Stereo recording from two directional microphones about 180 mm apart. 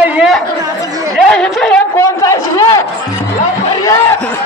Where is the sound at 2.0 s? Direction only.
15° left (ahead or behind).